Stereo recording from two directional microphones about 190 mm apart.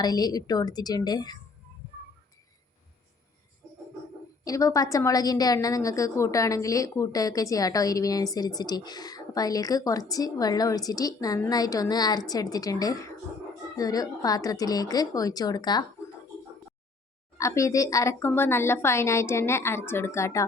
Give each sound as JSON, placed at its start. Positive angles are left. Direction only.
{"t": 0.0, "sound": "a woman's voice", "side_deg": 20}
{"t": 4.4, "sound": "a woman's voice", "side_deg": 15}
{"t": 17.3, "sound": "a woman's voice", "side_deg": 15}